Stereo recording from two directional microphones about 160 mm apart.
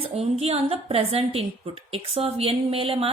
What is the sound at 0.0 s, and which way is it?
A woman's voice, 40° right (ahead or behind).